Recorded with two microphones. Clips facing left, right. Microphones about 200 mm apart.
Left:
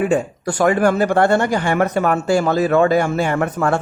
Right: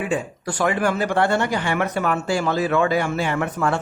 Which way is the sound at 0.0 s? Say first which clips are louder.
Left 7 dB; 45° left (ahead or behind).